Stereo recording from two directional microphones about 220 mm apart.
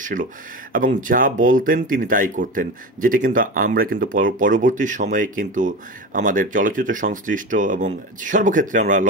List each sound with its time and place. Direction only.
0.0 s speech: 35° right (ahead or behind)